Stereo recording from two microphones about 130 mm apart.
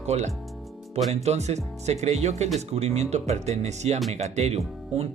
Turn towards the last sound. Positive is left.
turn(degrees=-55)  # may be behind; listen again after turning